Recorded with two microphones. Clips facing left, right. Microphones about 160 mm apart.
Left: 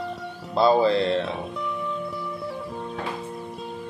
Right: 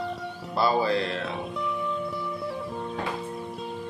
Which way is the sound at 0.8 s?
25° left (ahead or behind).